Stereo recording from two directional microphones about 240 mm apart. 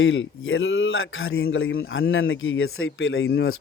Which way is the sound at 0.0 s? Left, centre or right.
Left.